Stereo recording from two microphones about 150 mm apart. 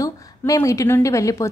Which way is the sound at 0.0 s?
20° left (ahead or behind).